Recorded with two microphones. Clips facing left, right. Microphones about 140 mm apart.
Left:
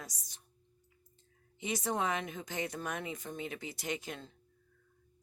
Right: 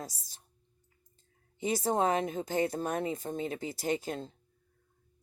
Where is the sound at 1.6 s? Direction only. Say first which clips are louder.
Right 6 dB; 30° right (ahead or behind).